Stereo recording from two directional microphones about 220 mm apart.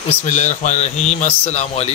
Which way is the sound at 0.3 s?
35° left (ahead or behind).